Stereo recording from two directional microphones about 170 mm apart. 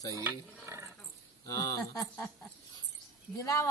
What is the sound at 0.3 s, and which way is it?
Speech, 15° right (ahead or behind).